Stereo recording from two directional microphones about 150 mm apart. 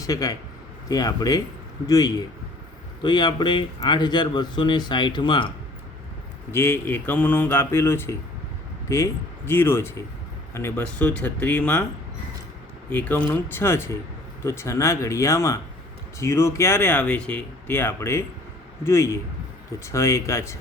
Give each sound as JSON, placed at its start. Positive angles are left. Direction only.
{"t": 0.0, "sound": "speech", "side_deg": 25}
{"t": 6.5, "sound": "speech", "side_deg": 15}
{"t": 9.5, "sound": "speech", "side_deg": 15}
{"t": 12.9, "sound": "speech", "side_deg": 10}